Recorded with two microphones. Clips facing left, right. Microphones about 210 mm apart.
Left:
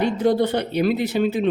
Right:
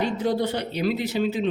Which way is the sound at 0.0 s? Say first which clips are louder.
Left 5 dB; 55° left (ahead or behind).